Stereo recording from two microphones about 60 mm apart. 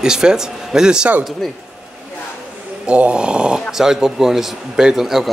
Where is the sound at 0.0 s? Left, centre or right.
Centre.